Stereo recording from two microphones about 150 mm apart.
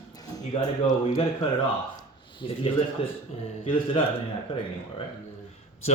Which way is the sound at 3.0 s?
40° left (ahead or behind).